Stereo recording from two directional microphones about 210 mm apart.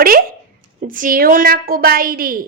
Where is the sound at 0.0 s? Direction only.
45° right (ahead or behind).